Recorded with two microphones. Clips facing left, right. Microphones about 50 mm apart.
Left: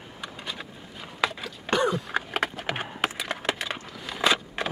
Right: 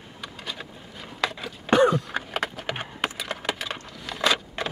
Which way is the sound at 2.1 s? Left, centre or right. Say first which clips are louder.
Left 1 dB; centre.